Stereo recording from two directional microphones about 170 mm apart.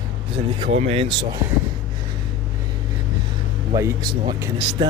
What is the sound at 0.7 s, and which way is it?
Speech, 35° right (ahead or behind).